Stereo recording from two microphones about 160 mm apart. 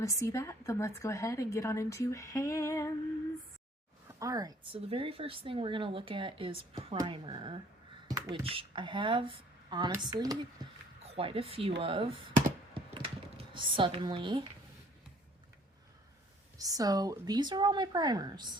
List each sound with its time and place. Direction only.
0.0 s a woman's voice: 20° left (ahead or behind)
4.2 s speech: 20° right (ahead or behind)
8.0 s a sound: 25° right (ahead or behind)
8.4 s speech: 35° right (ahead or behind)
11.0 s speech: 35° right (ahead or behind)
12.7 s computer keyboard: 35° right (ahead or behind)
16.6 s speech: 20° right (ahead or behind)